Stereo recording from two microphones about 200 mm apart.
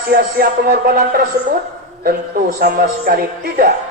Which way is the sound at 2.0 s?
45° right (ahead or behind).